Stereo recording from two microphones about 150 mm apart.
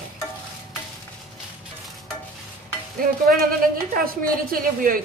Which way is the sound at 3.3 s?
70° right (ahead or behind).